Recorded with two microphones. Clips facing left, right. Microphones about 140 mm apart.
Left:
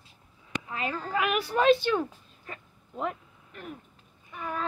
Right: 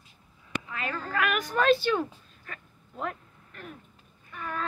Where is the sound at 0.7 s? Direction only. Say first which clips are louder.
Left 3 dB; 25° left (ahead or behind).